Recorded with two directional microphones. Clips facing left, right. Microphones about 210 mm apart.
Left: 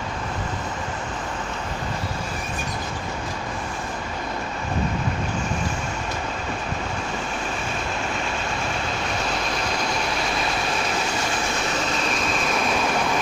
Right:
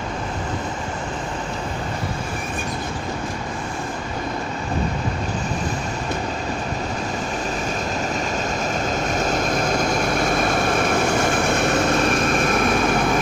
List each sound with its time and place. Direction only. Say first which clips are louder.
9.0 s vehicle: right 5 dB; 45° right (ahead or behind)